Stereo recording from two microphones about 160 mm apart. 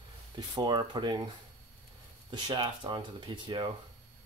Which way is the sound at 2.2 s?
30° right (ahead or behind).